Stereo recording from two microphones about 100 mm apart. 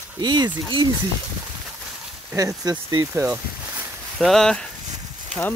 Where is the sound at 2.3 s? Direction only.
35° right (ahead or behind).